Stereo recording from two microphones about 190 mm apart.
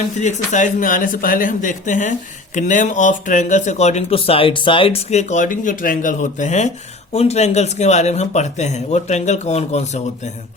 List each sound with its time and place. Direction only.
0.2 s speech: 40° left (ahead or behind)